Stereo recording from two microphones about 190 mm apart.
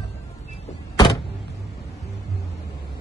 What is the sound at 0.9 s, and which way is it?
Power windows, 20° left (ahead or behind).